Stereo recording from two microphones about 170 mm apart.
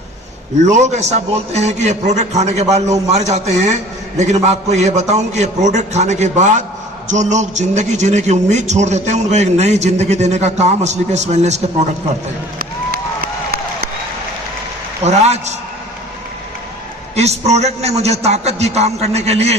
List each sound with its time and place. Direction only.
0.6 s a man's voice: 45° right (ahead or behind)
12.5 s a sound: 60° right (ahead or behind)
15.0 s a man's voice: 40° right (ahead or behind)
17.1 s a man's voice: 40° right (ahead or behind)